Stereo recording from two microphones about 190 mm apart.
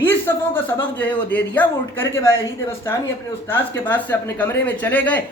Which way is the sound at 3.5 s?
10° left (ahead or behind).